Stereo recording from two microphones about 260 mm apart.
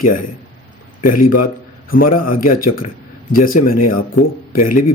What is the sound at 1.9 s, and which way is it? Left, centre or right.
Speech, left.